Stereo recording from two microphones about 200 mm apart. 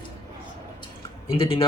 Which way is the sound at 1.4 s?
25° left (ahead or behind).